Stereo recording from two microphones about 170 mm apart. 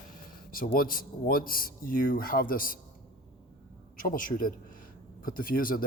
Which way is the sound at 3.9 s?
55° left (ahead or behind).